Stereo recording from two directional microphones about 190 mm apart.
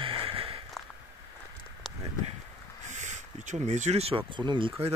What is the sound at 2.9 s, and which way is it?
Speech, 40° right (ahead or behind).